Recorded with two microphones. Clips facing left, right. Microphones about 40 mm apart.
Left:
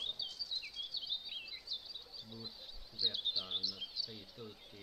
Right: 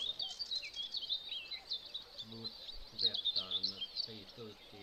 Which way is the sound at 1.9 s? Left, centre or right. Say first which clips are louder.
Right 2 dB; right.